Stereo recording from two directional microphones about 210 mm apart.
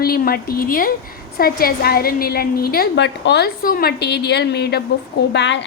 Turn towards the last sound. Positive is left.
turn(degrees=55)  # may be behind; listen again after turning